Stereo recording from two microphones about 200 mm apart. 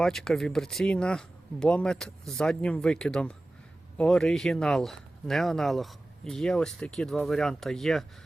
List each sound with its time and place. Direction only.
0.0 s speech: centre (ahead or behind)